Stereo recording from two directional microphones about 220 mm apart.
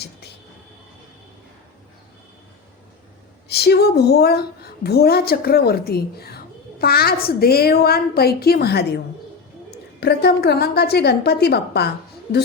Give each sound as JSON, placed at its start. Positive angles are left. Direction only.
{"t": 3.5, "sound": "a woman's voice", "side_deg": 45}
{"t": 10.0, "sound": "a woman's voice", "side_deg": 50}